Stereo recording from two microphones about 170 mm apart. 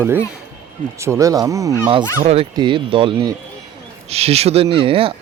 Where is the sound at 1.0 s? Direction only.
15° right (ahead or behind).